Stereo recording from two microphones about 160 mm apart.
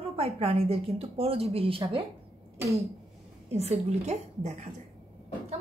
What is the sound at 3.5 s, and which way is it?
A woman's voice, 40° right (ahead or behind).